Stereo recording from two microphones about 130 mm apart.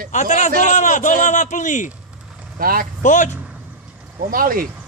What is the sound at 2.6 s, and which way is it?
Speech, 90° right.